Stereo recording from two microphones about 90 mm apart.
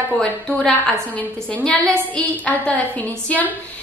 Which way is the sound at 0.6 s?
15° left (ahead or behind).